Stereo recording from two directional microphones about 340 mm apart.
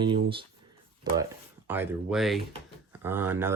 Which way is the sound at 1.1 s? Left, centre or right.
Centre.